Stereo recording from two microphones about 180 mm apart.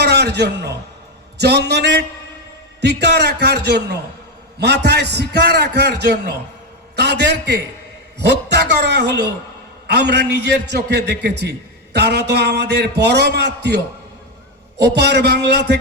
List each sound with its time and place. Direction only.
0.0 s a man's voice: 65° right (ahead or behind)
14.9 s a man's voice: 65° right (ahead or behind)